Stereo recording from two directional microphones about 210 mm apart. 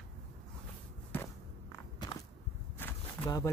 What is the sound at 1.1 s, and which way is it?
Walk, 15° left (ahead or behind).